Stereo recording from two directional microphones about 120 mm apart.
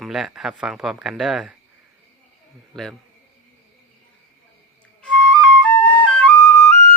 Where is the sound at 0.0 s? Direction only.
5° right (ahead or behind).